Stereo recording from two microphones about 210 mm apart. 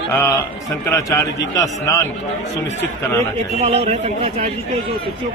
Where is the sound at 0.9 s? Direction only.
15° left (ahead or behind).